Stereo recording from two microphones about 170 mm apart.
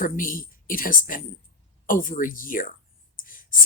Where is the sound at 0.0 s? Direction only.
55° left (ahead or behind).